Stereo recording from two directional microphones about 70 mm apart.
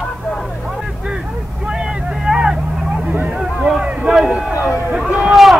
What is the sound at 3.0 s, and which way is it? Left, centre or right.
Hubbub, right.